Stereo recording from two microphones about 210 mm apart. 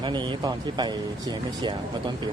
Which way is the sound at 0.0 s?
20° right (ahead or behind).